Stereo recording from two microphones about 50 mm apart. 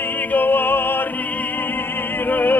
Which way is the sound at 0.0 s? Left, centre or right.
Left.